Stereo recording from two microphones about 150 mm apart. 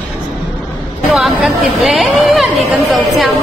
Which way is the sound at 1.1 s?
Centre (ahead or behind).